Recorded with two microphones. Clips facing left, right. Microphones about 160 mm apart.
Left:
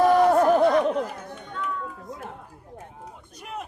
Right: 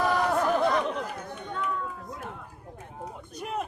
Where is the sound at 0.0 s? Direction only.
40° left (ahead or behind).